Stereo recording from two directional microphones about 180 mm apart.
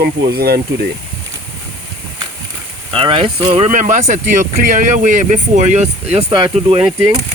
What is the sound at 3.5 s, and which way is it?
Speech, 40° right (ahead or behind).